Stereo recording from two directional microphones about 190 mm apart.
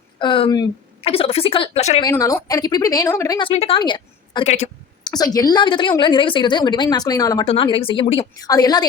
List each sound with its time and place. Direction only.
0.2 s a woman's voice: 25° left (ahead or behind)
2.0 s a woman's voice: 15° left (ahead or behind); by 4.7 s 35° left (ahead or behind)
5.0 s a woman's voice: 20° left (ahead or behind)